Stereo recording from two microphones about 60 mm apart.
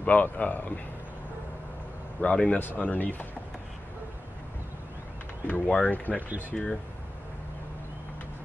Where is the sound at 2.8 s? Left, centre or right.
Left.